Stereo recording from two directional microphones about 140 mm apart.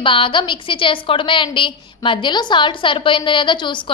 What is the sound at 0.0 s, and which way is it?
A woman's voice, 40° left (ahead or behind).